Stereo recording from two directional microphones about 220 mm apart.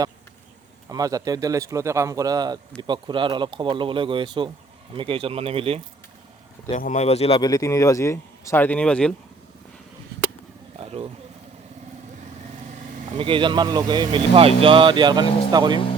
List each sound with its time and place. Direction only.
0.9 s speech: 15° right (ahead or behind)
6.7 s speech: 35° left (ahead or behind); by 9.1 s 5° left (ahead or behind)
10.8 s a sound: 25° right (ahead or behind)
13.1 s speech: 25° right (ahead or behind)